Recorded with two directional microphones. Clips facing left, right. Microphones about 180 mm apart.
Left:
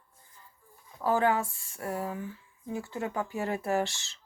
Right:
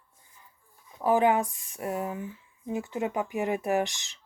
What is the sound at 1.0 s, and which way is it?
Speech, 15° right (ahead or behind).